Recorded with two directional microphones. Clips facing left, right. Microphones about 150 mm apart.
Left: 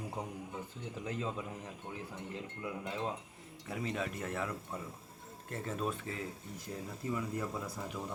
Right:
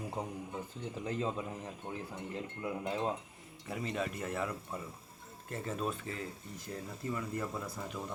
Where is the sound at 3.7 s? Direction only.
Centre (ahead or behind).